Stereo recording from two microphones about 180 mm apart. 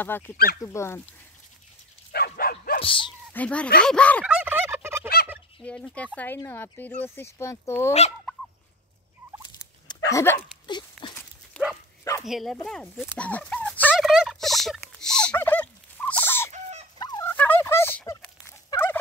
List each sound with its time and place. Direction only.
0.1 s speech: 10° left (ahead or behind)
2.1 s dog: 55° left (ahead or behind)
2.8 s speech: 30° left (ahead or behind)
3.3 s speech: 5° left (ahead or behind)
4.2 s fowl: 10° right (ahead or behind)
5.6 s speech: 5° left (ahead or behind)
10.1 s speech: 15° left (ahead or behind)
10.7 s a sound: 25° left (ahead or behind)
11.6 s livestock: 5° left (ahead or behind)
12.2 s speech: centre (ahead or behind)
13.1 s a sound: 10° left (ahead or behind)
13.9 s turkey: centre (ahead or behind)
17.0 s fowl: 20° left (ahead or behind)
17.3 s turkey: 10° left (ahead or behind)